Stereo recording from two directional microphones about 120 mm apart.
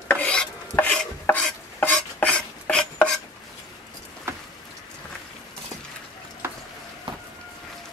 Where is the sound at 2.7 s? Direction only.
10° left (ahead or behind).